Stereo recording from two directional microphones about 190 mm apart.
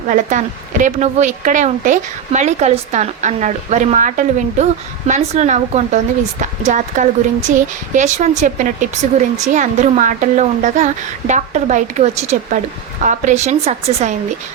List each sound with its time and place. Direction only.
0.1 s a woman's voice: 40° right (ahead or behind)